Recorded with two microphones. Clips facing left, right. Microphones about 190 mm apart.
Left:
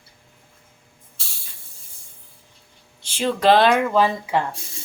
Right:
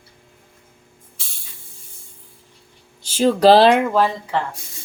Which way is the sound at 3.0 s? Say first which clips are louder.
Right 6 dB; 40° right (ahead or behind).